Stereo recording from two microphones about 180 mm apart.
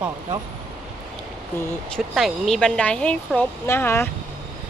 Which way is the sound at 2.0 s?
Centre (ahead or behind).